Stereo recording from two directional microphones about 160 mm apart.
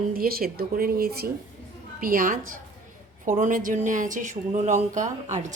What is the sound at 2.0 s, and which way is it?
A woman's voice, 60° right (ahead or behind).